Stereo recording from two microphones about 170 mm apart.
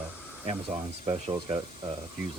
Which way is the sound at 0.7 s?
40° right (ahead or behind).